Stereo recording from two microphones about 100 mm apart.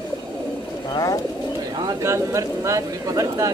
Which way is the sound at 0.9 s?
35° left (ahead or behind).